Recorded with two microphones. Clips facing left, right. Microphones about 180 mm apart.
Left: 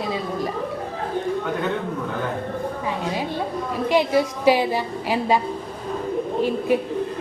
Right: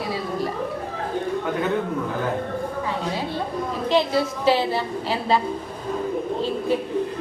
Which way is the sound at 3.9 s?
15° left (ahead or behind).